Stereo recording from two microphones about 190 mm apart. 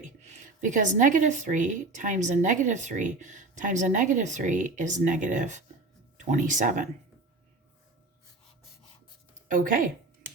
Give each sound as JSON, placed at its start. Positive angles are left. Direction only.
{"t": 0.3, "sound": "speech", "side_deg": -40}
{"t": 9.5, "sound": "speech", "side_deg": -45}